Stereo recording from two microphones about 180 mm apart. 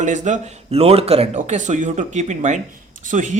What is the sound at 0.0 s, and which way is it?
Speech, 40° right (ahead or behind).